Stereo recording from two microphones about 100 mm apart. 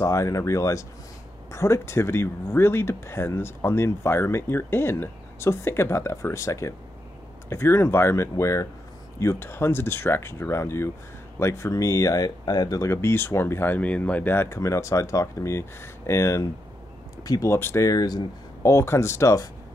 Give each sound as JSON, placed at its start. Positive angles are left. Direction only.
{"t": 0.0, "sound": "speech", "side_deg": 30}
{"t": 17.5, "sound": "speech", "side_deg": 25}
{"t": 17.8, "sound": "speech", "side_deg": 40}
{"t": 18.6, "sound": "speech", "side_deg": 30}